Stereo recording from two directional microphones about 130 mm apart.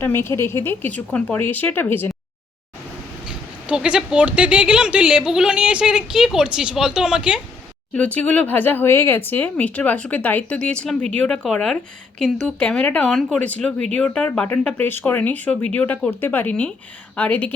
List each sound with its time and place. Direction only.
0.0 s speech: 20° left (ahead or behind)
3.2 s speech: 5° right (ahead or behind)
7.9 s a woman's voice: 10° left (ahead or behind)